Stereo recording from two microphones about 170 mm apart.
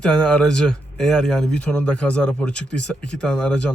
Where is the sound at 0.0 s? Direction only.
5° left (ahead or behind).